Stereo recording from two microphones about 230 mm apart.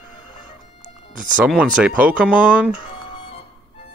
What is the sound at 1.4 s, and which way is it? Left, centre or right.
Speech, centre.